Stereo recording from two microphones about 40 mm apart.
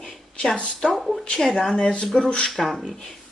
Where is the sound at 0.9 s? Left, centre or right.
Centre.